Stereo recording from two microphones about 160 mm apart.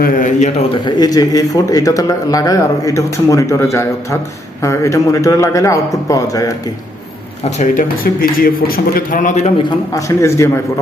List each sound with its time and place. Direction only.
0.0 s a man's voice: 55° left (ahead or behind)
0.7 s speech: 25° left (ahead or behind)
7.6 s a man's voice: 55° left (ahead or behind)
9.6 s a man's voice: 20° left (ahead or behind)